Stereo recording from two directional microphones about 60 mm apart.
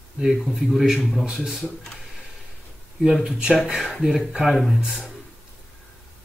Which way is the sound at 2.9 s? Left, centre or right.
Centre.